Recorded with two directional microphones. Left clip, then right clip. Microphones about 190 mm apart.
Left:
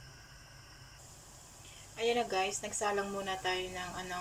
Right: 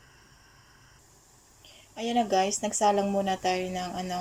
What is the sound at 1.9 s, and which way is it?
A woman's voice, 30° right (ahead or behind).